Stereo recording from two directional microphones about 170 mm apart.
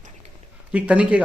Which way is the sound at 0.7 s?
10° right (ahead or behind).